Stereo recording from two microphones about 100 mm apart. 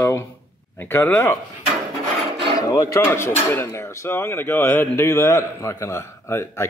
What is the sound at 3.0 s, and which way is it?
A man's voice, 25° left (ahead or behind).